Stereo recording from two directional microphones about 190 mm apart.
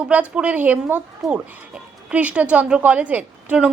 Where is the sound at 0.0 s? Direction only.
5° right (ahead or behind).